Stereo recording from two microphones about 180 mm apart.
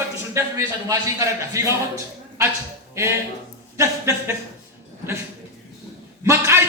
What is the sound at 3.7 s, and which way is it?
Speech, 15° right (ahead or behind).